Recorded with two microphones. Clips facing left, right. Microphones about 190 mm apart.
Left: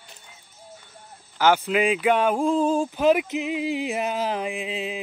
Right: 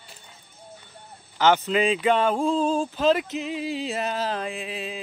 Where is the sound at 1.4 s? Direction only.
10° left (ahead or behind).